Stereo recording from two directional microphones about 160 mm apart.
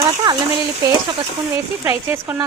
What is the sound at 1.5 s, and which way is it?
Speech, 15° right (ahead or behind).